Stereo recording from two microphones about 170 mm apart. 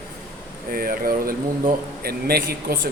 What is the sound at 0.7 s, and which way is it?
A man's voice, 60° right (ahead or behind).